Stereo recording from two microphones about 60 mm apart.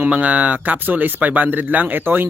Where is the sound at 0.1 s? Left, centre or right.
Right.